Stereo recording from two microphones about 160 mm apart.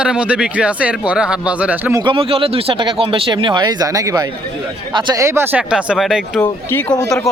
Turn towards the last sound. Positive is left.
turn(degrees=20)  # may be behind; listen again after turning